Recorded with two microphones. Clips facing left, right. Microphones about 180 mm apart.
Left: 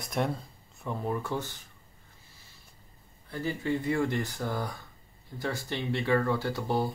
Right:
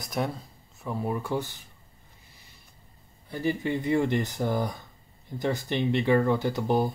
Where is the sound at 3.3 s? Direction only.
20° right (ahead or behind).